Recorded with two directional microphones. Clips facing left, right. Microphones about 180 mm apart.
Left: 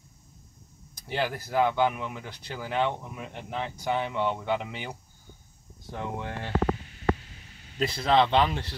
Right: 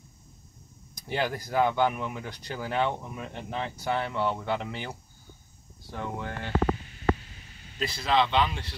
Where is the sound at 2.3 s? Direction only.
5° left (ahead or behind).